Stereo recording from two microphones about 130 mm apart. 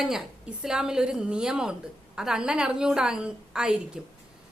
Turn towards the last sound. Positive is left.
turn(degrees=-5)  # may be behind; listen again after turning